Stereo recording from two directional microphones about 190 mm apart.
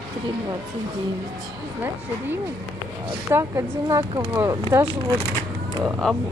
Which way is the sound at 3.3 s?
15° right (ahead or behind).